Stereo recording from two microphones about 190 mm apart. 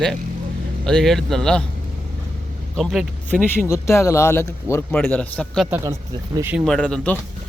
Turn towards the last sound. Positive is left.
turn(degrees=5)  # may be behind; listen again after turning